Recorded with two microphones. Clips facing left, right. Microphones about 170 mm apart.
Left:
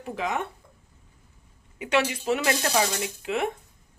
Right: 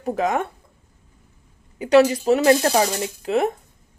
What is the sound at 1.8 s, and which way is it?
Speech, 35° right (ahead or behind).